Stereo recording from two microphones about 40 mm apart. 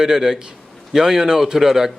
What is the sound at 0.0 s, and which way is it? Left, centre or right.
A man's voice, centre.